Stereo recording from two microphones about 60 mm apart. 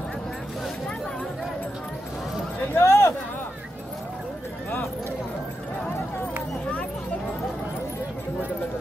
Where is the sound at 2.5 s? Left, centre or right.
Left.